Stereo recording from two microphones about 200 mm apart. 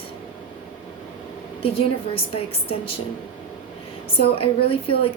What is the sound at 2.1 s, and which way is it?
Speech, 25° left (ahead or behind).